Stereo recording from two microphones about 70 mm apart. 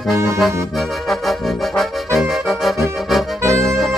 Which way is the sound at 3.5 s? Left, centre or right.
Right.